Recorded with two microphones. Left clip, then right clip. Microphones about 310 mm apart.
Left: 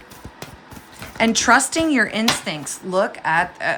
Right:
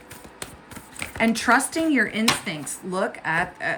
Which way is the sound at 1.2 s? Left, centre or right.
Centre.